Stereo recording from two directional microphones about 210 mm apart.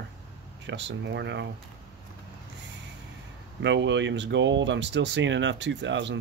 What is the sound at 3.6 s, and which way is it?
Speech, 60° right (ahead or behind).